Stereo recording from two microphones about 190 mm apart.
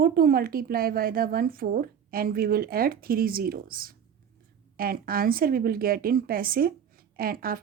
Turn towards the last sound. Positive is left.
turn(degrees=-50)  # may be behind; listen again after turning